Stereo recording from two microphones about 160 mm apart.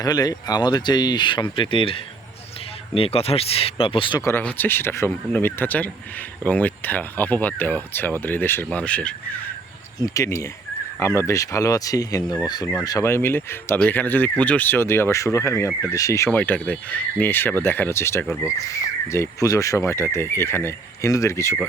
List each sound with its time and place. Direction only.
0.0 s speech: 25° left (ahead or behind)
4.2 s speech: 15° left (ahead or behind)
10.0 s speech: 20° left (ahead or behind)